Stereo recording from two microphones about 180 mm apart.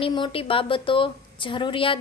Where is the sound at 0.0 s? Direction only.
30° left (ahead or behind).